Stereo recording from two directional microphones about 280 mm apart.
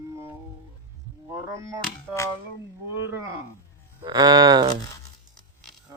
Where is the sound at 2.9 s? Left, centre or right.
Centre.